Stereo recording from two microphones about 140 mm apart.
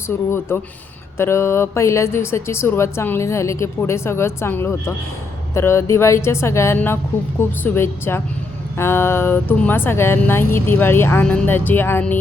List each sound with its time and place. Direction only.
0.3 s speech: 15° left (ahead or behind)